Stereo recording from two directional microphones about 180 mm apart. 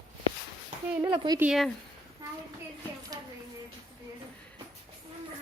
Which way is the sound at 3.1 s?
20° right (ahead or behind).